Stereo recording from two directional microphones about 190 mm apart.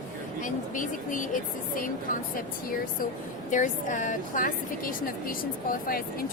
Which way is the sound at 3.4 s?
40° left (ahead or behind).